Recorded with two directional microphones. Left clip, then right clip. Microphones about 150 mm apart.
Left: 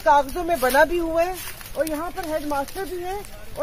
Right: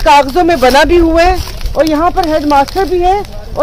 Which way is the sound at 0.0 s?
20° right (ahead or behind).